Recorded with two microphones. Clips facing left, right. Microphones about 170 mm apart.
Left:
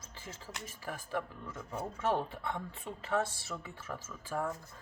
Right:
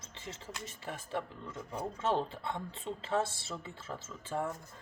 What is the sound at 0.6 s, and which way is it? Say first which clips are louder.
Speech: left 1 dB; 25° right (ahead or behind).